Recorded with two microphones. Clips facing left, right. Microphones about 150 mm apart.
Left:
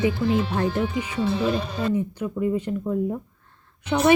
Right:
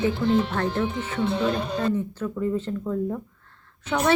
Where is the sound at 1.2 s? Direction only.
55° right (ahead or behind).